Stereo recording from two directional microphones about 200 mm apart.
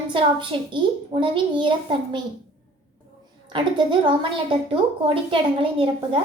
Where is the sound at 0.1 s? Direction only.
25° right (ahead or behind).